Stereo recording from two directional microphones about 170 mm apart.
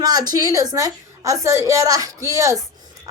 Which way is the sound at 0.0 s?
25° right (ahead or behind).